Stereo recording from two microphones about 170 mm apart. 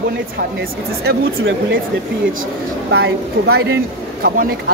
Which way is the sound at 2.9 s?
75° right (ahead or behind).